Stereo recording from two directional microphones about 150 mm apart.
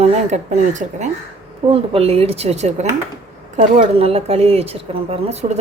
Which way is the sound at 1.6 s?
40° right (ahead or behind).